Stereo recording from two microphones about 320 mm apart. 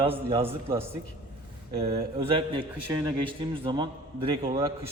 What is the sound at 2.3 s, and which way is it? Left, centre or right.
A man's voice, centre.